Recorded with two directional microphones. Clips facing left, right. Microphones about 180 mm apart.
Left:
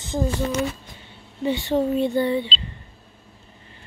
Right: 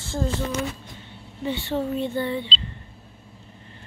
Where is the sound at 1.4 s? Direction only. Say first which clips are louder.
Left 5 dB; 15° left (ahead or behind).